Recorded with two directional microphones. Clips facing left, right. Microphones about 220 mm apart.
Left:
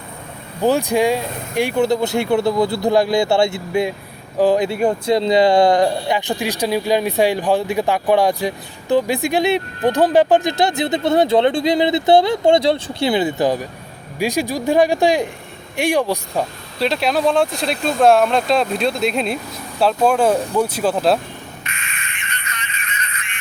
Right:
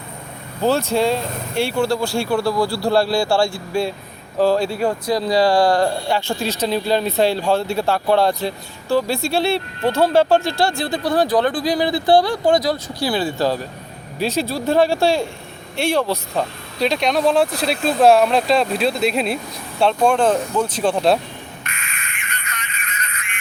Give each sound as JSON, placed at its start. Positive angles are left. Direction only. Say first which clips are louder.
{"t": 0.6, "sound": "speech", "louder": "left 2 dB", "side_deg": 15}
{"t": 16.8, "sound": "speech", "louder": "even", "side_deg": 0}
{"t": 21.6, "sound": "a sound", "louder": "left 1 dB", "side_deg": -45}